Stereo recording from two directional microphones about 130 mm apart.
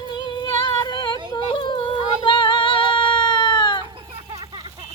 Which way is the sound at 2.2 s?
40° left (ahead or behind).